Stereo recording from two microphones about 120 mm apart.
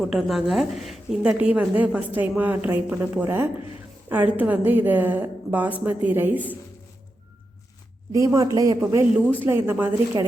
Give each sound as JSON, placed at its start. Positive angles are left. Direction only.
{"t": 0.0, "sound": "a woman's voice", "side_deg": 0}
{"t": 8.1, "sound": "a woman's voice", "side_deg": -25}